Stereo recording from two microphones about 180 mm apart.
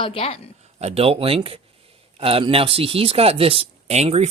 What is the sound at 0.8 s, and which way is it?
Speech, 35° right (ahead or behind).